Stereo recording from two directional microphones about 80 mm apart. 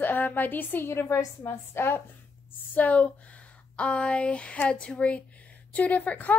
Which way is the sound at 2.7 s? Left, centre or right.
Centre.